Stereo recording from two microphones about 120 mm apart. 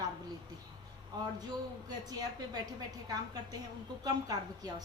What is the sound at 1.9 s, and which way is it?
A woman's voice, 35° right (ahead or behind).